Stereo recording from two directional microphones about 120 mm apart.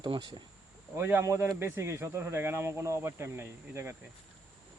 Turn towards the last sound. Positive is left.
turn(degrees=-20)  # may be behind; listen again after turning